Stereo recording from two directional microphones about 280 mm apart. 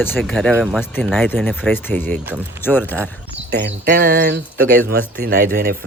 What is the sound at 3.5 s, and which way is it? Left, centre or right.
Speech, right.